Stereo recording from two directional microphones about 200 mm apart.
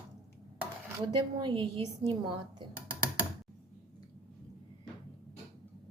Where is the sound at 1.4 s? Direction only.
25° right (ahead or behind).